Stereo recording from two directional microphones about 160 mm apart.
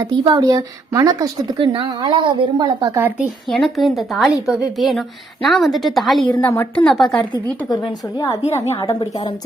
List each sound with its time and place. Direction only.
0.0 s speech: 25° right (ahead or behind)
3.2 s a woman's voice: centre (ahead or behind)
6.3 s a woman's voice: 10° left (ahead or behind)
7.7 s speech: 25° left (ahead or behind)